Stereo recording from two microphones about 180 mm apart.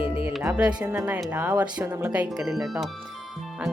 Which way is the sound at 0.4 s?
5° right (ahead or behind).